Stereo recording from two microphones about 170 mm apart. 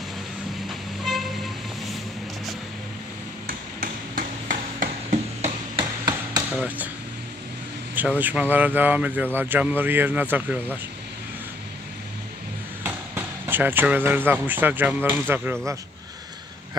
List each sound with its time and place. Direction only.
0.7 s vehicle: centre (ahead or behind)
3.4 s hammer: 55° right (ahead or behind)
7.9 s speech: 10° right (ahead or behind)
12.8 s speech: 10° right (ahead or behind)